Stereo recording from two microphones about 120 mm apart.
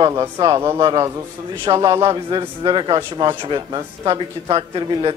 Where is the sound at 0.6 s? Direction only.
20° right (ahead or behind).